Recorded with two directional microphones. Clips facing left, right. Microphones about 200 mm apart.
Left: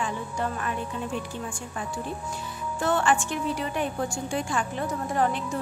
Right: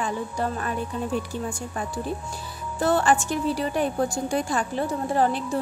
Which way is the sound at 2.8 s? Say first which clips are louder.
Right 3 dB; 35° right (ahead or behind).